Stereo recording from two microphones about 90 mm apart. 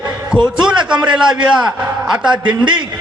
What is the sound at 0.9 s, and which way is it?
Speech, 60° right (ahead or behind).